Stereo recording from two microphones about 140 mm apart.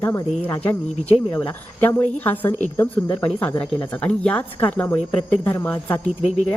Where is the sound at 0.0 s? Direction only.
15° left (ahead or behind).